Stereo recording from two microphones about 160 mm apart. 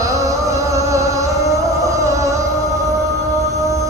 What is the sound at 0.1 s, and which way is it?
Music, 20° right (ahead or behind).